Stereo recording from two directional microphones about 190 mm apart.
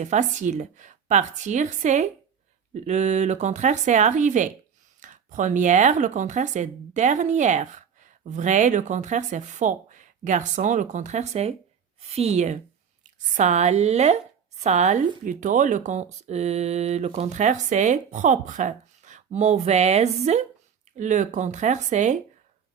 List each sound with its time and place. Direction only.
0.0 s speech: 40° right (ahead or behind)